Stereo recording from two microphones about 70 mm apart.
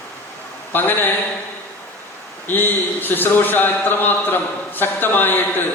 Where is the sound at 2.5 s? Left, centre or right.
Left.